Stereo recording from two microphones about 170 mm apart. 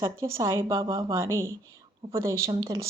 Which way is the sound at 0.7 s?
30° right (ahead or behind).